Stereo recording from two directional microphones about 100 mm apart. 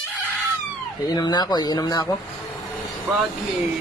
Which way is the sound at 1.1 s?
40° left (ahead or behind).